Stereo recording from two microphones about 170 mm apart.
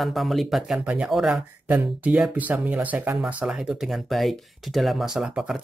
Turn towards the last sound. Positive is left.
turn(degrees=0)  # may be behind; listen again after turning